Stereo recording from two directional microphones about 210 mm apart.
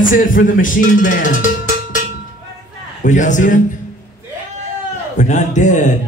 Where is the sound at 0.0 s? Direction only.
40° left (ahead or behind).